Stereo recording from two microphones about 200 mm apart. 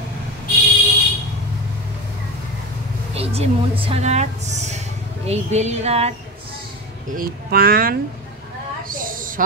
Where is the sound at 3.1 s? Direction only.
30° right (ahead or behind).